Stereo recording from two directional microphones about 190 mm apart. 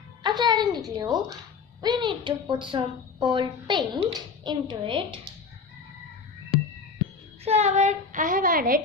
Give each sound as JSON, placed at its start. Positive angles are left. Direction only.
{"t": 0.2, "sound": "music", "side_deg": -20}
{"t": 0.9, "sound": "a woman's voice", "side_deg": -20}
{"t": 7.4, "sound": "a child's voice", "side_deg": -35}